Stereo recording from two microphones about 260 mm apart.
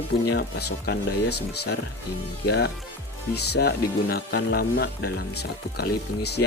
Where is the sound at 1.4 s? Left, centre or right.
Left.